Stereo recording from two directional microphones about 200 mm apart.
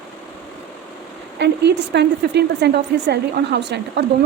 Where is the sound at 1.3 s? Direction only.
60° right (ahead or behind).